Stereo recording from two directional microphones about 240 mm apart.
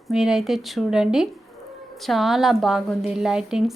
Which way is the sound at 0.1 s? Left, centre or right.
Centre.